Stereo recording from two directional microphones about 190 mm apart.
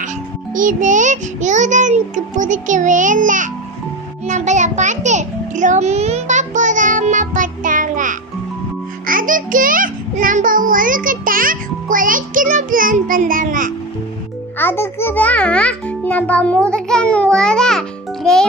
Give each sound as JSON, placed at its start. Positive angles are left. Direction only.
{"t": 0.5, "sound": "music", "side_deg": -45}
{"t": 9.0, "sound": "a child's voice", "side_deg": -45}
{"t": 14.6, "sound": "a child's voice", "side_deg": 10}